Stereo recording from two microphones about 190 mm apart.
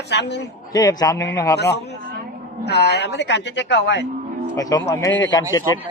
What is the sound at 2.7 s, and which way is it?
A woman's voice, 60° left (ahead or behind).